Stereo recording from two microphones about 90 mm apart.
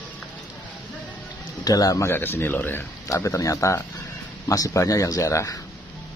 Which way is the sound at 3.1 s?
35° left (ahead or behind).